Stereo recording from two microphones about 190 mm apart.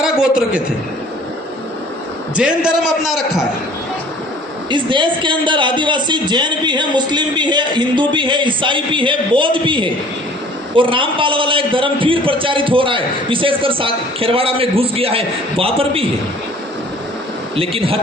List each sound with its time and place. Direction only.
0.0 s a sound: 5° right (ahead or behind)
2.3 s a man's voice: 5° right (ahead or behind)
4.7 s a man's voice: 25° right (ahead or behind)
17.6 s a man's voice: 30° right (ahead or behind)